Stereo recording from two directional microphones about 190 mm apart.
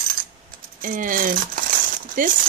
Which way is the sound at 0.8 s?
45° right (ahead or behind).